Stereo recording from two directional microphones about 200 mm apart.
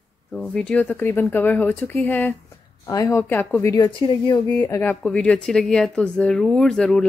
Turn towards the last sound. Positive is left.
turn(degrees=0)  # may be behind; listen again after turning